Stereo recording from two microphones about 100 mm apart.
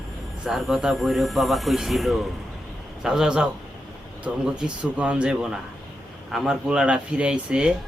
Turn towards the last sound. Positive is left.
turn(degrees=-10)  # may be behind; listen again after turning